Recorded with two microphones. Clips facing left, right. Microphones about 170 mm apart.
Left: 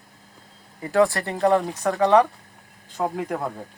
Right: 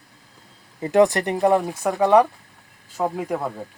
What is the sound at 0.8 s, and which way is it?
Speech, 20° right (ahead or behind).